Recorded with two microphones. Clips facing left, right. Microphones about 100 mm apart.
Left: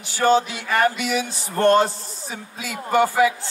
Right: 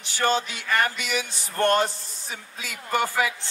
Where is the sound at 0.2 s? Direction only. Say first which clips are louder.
Left 6 dB; 15° left (ahead or behind).